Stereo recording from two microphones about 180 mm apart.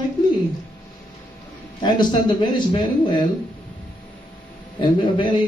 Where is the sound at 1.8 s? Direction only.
25° left (ahead or behind).